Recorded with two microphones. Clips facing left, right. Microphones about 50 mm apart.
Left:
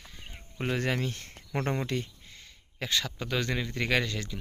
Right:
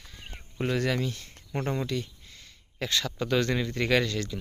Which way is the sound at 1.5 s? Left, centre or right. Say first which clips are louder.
Even; left.